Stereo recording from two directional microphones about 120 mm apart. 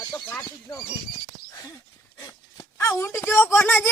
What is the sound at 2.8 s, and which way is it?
Speech, 20° left (ahead or behind).